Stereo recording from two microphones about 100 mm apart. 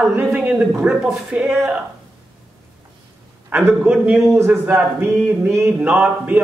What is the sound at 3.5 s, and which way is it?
Speech, 15° right (ahead or behind).